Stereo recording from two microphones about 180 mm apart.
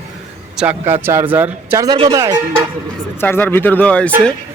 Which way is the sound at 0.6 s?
10° right (ahead or behind).